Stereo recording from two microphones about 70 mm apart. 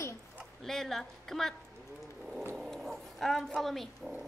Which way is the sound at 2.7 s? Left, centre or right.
Centre.